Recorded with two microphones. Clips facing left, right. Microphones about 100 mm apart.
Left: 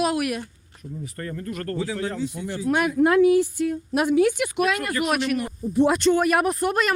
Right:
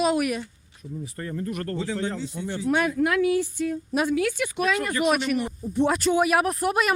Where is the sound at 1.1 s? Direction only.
15° right (ahead or behind).